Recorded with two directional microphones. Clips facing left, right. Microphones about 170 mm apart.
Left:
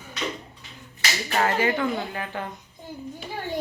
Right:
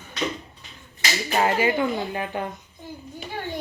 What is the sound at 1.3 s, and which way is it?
Speech, 15° right (ahead or behind).